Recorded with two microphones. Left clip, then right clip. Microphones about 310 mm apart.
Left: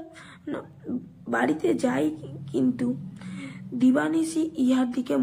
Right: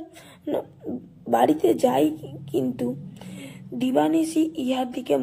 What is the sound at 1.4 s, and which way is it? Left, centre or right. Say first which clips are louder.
Speech: right 5 dB; centre.